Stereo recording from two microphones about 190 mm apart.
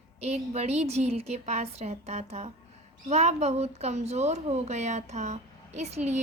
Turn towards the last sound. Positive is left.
turn(degrees=-35)  # may be behind; listen again after turning